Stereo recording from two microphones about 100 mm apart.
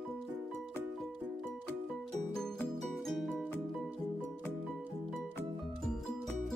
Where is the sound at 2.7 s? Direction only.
Centre (ahead or behind).